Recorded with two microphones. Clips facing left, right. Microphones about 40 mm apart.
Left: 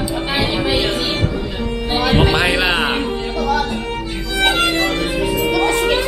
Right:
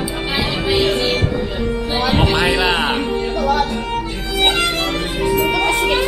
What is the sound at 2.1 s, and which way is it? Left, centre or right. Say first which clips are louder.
Music: left 1 dB; centre.